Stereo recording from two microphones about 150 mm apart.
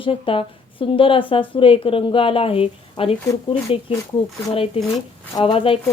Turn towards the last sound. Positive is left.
turn(degrees=40)  # may be behind; listen again after turning